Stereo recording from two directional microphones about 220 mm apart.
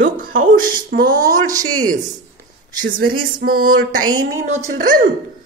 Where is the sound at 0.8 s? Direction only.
45° right (ahead or behind).